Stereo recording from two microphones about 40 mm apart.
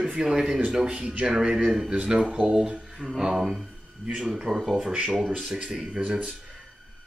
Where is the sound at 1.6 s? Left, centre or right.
Centre.